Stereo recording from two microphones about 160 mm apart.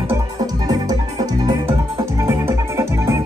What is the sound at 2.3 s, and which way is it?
Music, 20° right (ahead or behind).